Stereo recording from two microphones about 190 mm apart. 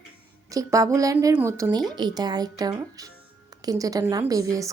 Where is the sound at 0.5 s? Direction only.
15° right (ahead or behind).